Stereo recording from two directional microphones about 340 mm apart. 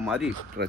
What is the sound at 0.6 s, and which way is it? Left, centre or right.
Speech, right.